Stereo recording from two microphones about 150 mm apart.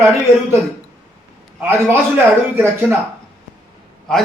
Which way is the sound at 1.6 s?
15° right (ahead or behind).